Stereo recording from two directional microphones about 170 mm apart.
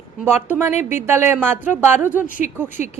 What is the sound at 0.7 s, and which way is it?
Speech, 45° left (ahead or behind).